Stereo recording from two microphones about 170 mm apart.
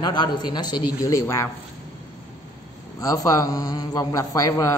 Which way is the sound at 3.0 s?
20° left (ahead or behind).